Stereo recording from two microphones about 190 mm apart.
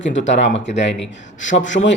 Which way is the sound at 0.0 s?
70° left (ahead or behind).